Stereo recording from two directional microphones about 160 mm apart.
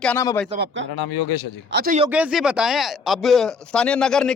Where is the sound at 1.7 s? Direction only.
70° right (ahead or behind).